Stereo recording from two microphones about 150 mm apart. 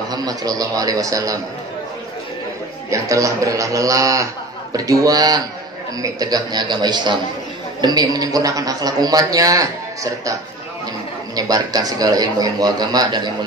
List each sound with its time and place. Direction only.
0.1 s a man's voice: 25° right (ahead or behind)
2.9 s a man's voice: 20° right (ahead or behind)
11.3 s a man's voice: 25° right (ahead or behind)